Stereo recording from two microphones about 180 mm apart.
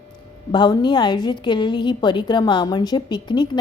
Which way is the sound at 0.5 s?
25° left (ahead or behind).